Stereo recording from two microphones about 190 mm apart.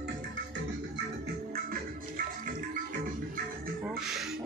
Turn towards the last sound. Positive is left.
turn(degrees=0)  # may be behind; listen again after turning